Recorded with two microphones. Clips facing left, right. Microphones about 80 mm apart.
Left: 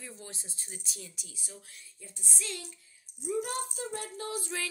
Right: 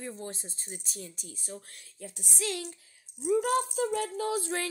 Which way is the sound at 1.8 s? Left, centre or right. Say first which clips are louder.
Right 7 dB; right.